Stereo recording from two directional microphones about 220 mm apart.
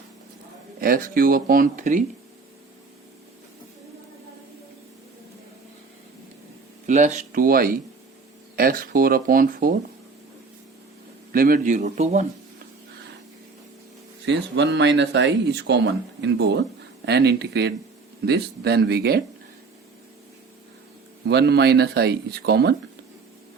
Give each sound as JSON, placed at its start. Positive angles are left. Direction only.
{"t": 0.8, "sound": "speech", "side_deg": -40}
{"t": 6.8, "sound": "speech", "side_deg": -35}
{"t": 11.3, "sound": "speech", "side_deg": -40}
{"t": 14.3, "sound": "speech", "side_deg": -55}
{"t": 21.2, "sound": "speech", "side_deg": -50}